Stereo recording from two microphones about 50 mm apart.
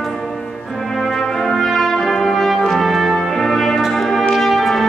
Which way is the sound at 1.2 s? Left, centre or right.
Centre.